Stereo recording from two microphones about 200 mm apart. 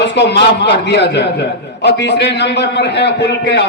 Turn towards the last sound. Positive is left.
turn(degrees=60)  # may be behind; listen again after turning